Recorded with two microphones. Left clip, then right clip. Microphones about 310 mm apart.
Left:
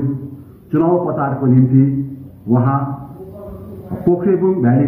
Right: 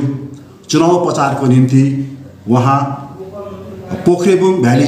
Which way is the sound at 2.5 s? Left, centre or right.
Right.